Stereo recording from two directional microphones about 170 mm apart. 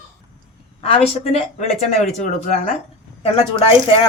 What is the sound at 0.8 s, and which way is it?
Speech, 35° left (ahead or behind).